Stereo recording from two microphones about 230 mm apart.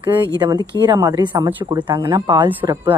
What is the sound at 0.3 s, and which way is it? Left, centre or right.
Speech, centre.